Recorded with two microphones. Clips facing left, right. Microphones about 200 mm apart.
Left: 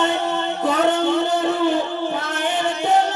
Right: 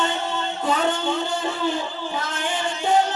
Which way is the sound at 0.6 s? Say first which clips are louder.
Left 4 dB; 65° left (ahead or behind).